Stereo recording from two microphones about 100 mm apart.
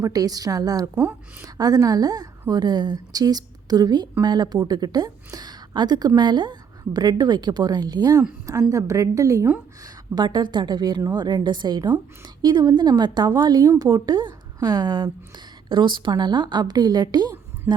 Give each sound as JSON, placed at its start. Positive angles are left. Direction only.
{"t": 0.0, "sound": "a woman's voice", "side_deg": -40}
{"t": 0.9, "sound": "speech", "side_deg": -15}
{"t": 1.5, "sound": "a woman's voice", "side_deg": -40}
{"t": 9.8, "sound": "a woman's voice", "side_deg": -45}